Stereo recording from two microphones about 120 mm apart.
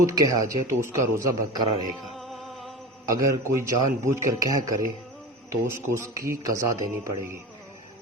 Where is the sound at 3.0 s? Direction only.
25° right (ahead or behind).